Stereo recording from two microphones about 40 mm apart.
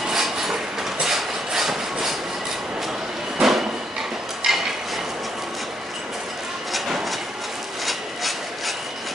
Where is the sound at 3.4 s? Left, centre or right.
Centre.